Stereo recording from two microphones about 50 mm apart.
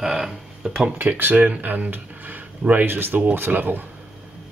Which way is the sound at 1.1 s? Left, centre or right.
Right.